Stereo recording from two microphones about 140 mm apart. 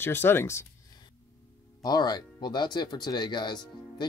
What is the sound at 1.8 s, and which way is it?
Speech, 30° left (ahead or behind).